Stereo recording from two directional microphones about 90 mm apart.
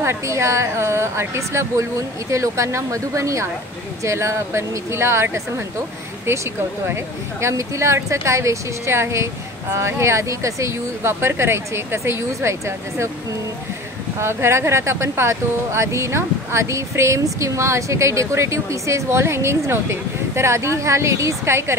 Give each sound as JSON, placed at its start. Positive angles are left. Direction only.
{"t": 0.0, "sound": "speech", "side_deg": -30}
{"t": 6.9, "sound": "speech", "side_deg": -30}
{"t": 14.2, "sound": "speech", "side_deg": -30}